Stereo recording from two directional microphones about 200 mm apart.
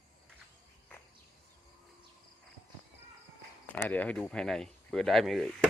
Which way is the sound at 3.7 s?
10° left (ahead or behind).